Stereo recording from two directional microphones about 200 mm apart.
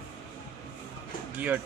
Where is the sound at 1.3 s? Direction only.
10° right (ahead or behind).